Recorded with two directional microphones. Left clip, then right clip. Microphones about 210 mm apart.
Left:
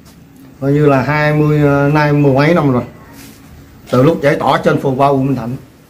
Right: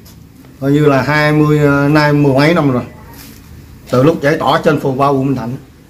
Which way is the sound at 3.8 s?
5° left (ahead or behind).